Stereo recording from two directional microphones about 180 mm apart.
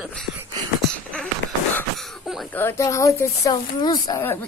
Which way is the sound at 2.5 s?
10° left (ahead or behind).